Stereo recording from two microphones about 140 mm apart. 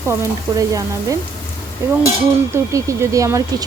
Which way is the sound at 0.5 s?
25° right (ahead or behind).